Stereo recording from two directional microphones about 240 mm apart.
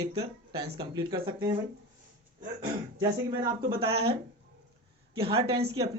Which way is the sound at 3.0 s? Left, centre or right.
Centre.